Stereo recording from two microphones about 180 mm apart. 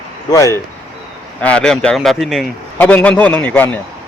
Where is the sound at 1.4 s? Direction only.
5° left (ahead or behind).